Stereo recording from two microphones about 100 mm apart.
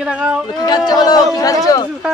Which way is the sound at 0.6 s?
40° left (ahead or behind).